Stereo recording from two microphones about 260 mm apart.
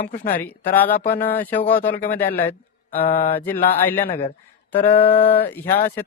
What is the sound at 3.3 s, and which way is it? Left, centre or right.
Speech, centre.